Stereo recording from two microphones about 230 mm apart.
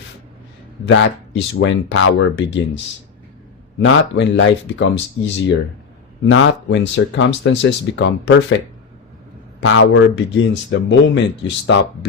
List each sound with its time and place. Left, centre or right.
0.9 s speech: left
3.8 s speech: left
6.2 s speech: left